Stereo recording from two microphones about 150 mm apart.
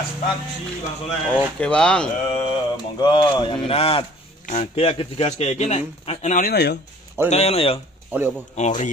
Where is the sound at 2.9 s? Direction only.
30° left (ahead or behind).